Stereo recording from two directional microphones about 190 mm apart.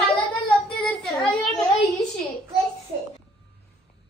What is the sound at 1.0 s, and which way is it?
Speech, 5° left (ahead or behind).